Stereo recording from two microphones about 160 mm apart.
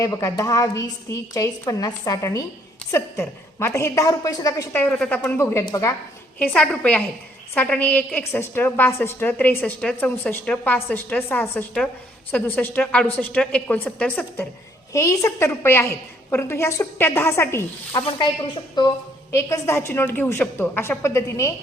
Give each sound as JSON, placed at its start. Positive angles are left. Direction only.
{"t": 0.0, "sound": "a woman's voice", "side_deg": 20}
{"t": 18.8, "sound": "a woman's voice", "side_deg": 25}
{"t": 19.3, "sound": "a woman's voice", "side_deg": 15}